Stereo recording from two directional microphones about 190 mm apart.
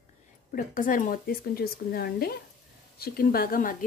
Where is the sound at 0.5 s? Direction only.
45° left (ahead or behind).